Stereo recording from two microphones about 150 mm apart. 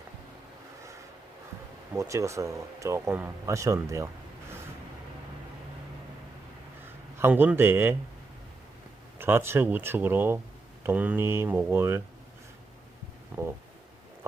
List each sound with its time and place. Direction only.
2.0 s speech: 20° right (ahead or behind)
7.2 s speech: 15° right (ahead or behind)
9.1 s speech: 15° right (ahead or behind)
13.3 s stomach rumble: 10° right (ahead or behind)